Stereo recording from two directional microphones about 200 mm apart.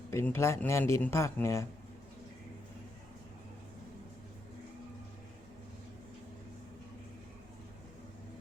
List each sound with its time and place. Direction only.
0.1 s speech: 15° left (ahead or behind)